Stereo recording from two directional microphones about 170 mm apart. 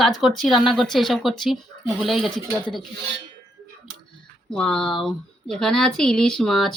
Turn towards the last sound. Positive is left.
turn(degrees=0)  # may be behind; listen again after turning